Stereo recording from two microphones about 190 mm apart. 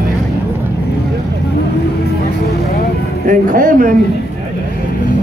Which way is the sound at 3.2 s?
45° right (ahead or behind).